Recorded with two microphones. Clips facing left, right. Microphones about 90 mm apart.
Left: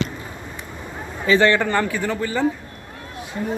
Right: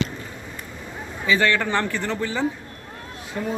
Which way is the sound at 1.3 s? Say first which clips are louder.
Left 4 dB; 30° left (ahead or behind).